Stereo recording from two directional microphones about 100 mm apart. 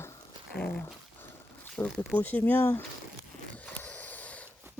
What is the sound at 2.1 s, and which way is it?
Speech, 20° left (ahead or behind).